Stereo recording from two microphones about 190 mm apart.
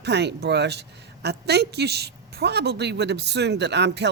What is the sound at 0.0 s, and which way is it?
A woman's voice, 60° right (ahead or behind).